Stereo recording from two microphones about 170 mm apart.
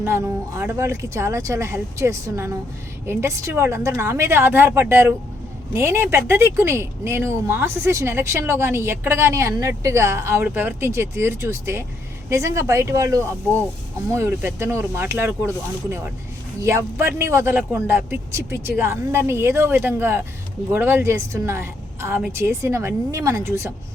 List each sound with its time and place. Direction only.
0.0 s speech: 15° right (ahead or behind)